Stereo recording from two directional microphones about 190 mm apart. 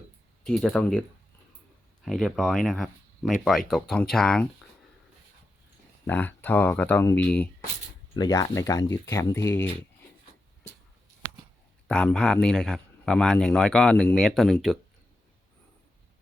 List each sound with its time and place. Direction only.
0.4 s speech: centre (ahead or behind)
2.0 s speech: centre (ahead or behind)
6.1 s speech: 10° left (ahead or behind)
8.1 s speech: 20° left (ahead or behind)
11.9 s speech: 5° left (ahead or behind)